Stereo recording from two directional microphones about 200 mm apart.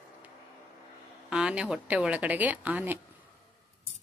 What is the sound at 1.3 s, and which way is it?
A woman's voice, 5° right (ahead or behind).